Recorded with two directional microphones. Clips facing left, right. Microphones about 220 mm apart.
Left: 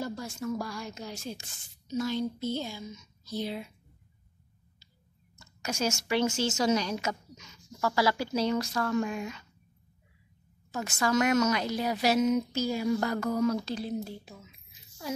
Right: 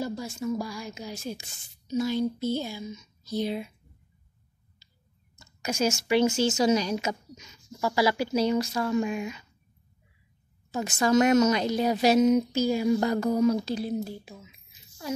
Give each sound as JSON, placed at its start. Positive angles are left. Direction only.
{"t": 0.0, "sound": "a woman's voice", "side_deg": -10}
{"t": 5.6, "sound": "a woman's voice", "side_deg": -20}
{"t": 10.7, "sound": "a woman's voice", "side_deg": -20}